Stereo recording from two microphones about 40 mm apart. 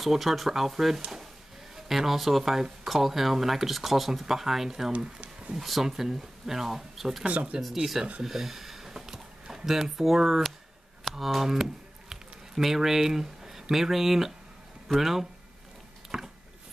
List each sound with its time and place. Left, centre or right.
0.0 s speech: centre
7.2 s speech: right
7.7 s speech: centre
8.2 s a sound: centre
9.7 s speech: centre
16.1 s a sound: centre